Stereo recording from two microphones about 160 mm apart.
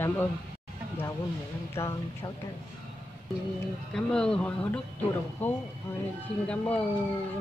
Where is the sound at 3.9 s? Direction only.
5° left (ahead or behind).